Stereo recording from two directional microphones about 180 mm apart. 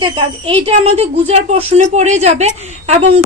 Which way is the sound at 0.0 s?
30° right (ahead or behind).